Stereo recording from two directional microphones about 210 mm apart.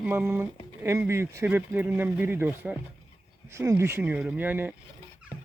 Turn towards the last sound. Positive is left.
turn(degrees=-10)  # may be behind; listen again after turning